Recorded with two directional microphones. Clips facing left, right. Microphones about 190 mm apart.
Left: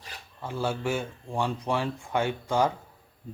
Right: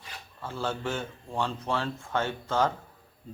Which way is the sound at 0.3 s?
15° left (ahead or behind).